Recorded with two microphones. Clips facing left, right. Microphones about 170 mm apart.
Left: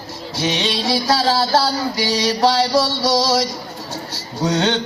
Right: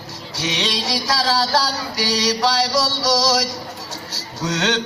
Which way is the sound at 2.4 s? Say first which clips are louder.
Left 4 dB; 35° left (ahead or behind).